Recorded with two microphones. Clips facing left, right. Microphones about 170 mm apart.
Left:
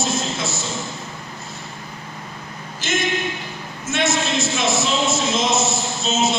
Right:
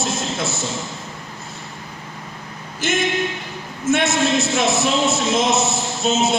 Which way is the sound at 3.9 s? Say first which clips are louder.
Right 4 dB; 60° right (ahead or behind).